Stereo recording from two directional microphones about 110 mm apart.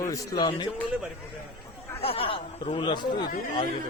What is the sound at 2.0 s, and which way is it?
Speech, 60° left (ahead or behind).